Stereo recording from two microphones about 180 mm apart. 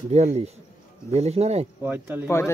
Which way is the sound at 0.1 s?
35° right (ahead or behind).